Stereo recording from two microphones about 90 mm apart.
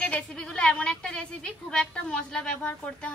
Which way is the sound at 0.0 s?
10° left (ahead or behind).